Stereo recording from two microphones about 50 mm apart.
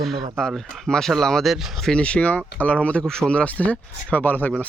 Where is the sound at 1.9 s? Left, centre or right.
Centre.